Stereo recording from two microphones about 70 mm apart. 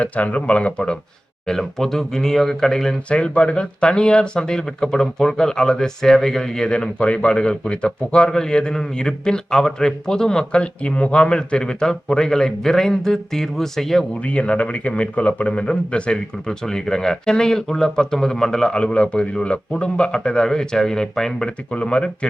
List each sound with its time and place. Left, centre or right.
0.0 s speech: centre
14.2 s speech: centre